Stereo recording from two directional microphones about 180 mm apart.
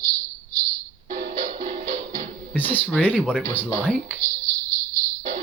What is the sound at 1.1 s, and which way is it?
Music, 45° right (ahead or behind).